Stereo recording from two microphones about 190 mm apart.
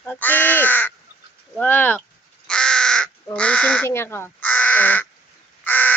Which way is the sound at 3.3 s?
5° left (ahead or behind).